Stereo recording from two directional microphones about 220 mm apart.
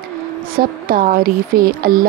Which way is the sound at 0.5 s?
40° right (ahead or behind).